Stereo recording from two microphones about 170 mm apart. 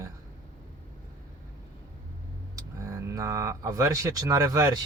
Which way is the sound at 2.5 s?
20° right (ahead or behind).